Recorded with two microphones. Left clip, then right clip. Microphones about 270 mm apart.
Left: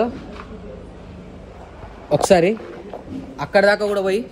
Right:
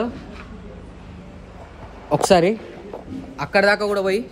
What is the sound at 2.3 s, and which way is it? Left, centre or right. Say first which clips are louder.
Speech: even; centre.